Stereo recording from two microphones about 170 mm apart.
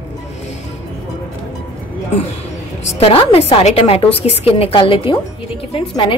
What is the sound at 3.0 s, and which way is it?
A woman's voice, 35° left (ahead or behind).